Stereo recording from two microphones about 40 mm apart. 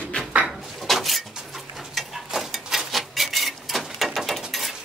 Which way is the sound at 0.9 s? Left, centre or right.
Centre.